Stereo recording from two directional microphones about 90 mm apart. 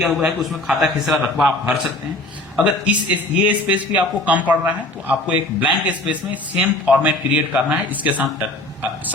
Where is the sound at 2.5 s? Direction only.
15° right (ahead or behind).